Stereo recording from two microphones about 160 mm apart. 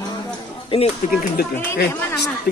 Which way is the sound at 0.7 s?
35° left (ahead or behind).